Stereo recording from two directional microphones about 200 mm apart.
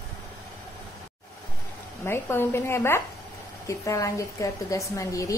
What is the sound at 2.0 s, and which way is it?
A woman's voice, 10° left (ahead or behind).